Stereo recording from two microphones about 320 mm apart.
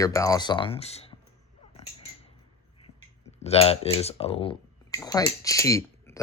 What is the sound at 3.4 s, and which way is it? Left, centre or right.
Speech, centre.